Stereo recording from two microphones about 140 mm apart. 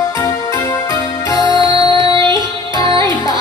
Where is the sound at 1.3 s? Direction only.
30° left (ahead or behind).